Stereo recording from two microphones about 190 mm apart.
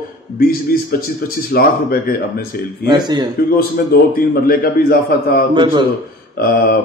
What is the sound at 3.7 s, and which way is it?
A man's voice, 50° left (ahead or behind).